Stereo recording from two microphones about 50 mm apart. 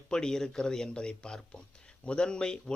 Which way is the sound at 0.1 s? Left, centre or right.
Centre.